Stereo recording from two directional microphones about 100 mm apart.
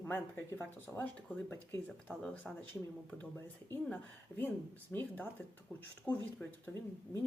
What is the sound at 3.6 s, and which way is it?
Speech, 20° left (ahead or behind).